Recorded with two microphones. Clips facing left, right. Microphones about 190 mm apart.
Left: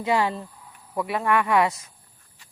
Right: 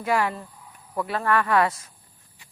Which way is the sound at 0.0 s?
25° left (ahead or behind).